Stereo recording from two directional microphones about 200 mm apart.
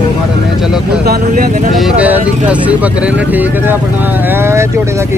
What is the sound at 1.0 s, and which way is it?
Speech, 50° right (ahead or behind).